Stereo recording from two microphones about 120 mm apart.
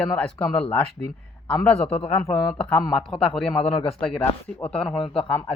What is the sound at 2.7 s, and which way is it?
Speech, 35° left (ahead or behind).